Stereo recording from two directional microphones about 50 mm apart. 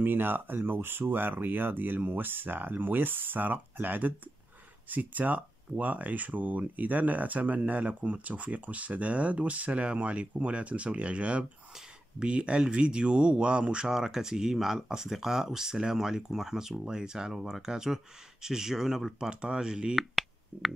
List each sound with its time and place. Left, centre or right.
0.0 s speech: right; by 19.1 s centre
19.1 s speech: centre
20.0 s a sound: centre